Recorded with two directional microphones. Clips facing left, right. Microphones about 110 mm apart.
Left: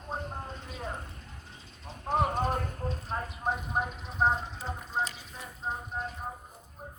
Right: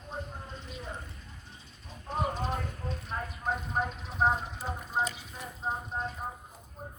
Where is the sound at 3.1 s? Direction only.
35° left (ahead or behind).